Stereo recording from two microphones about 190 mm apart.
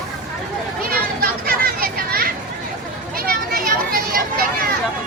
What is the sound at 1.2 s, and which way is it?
Children playing, 50° right (ahead or behind).